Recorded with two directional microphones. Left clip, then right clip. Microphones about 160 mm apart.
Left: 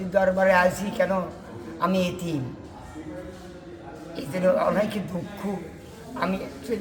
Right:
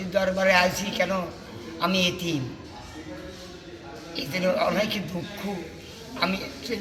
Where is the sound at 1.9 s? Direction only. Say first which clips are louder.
Right 2 dB; 50° left (ahead or behind).